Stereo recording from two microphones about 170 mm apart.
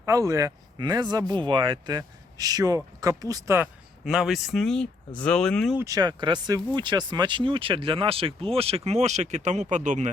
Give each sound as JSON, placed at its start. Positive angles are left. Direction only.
{"t": 0.0, "sound": "speech", "side_deg": -20}
{"t": 5.7, "sound": "speech", "side_deg": -20}